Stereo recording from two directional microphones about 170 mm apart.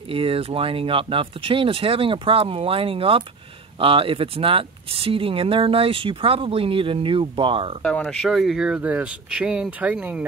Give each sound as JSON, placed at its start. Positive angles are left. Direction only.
{"t": 0.1, "sound": "speech", "side_deg": -35}
{"t": 7.8, "sound": "speech", "side_deg": 5}